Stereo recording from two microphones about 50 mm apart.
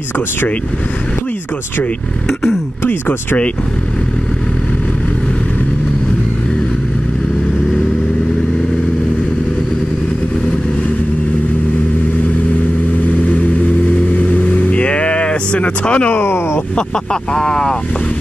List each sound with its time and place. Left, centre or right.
1.8 s speech: left
14.1 s vehicle: left
16.1 s speech: left
16.7 s speech: centre